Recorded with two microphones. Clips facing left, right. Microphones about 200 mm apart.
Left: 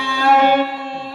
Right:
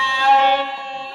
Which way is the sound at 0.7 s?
5° left (ahead or behind).